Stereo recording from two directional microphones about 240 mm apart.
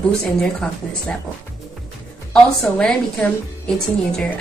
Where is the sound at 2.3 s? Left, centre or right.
Centre.